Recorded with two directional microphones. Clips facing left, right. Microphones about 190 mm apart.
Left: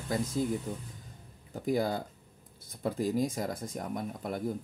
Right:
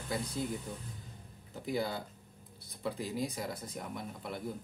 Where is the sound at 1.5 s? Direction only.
45° left (ahead or behind).